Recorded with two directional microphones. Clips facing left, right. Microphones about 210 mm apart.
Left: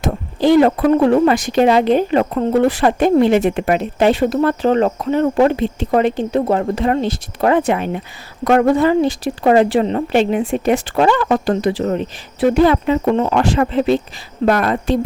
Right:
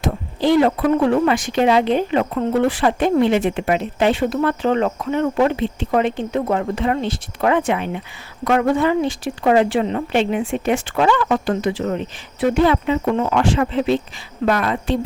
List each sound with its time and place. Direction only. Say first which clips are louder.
0.0 s speech: left 3 dB; 45° left (ahead or behind)
13.1 s a woman's voice: left 2 dB; 30° left (ahead or behind)